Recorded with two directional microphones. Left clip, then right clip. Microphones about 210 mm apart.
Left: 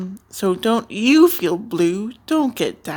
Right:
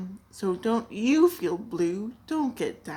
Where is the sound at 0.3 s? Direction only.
45° left (ahead or behind).